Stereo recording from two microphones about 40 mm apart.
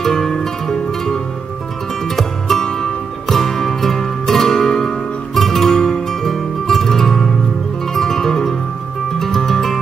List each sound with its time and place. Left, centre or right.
0.0 s music: centre